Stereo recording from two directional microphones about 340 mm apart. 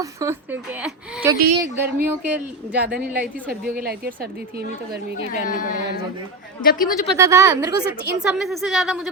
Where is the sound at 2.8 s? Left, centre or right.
Right.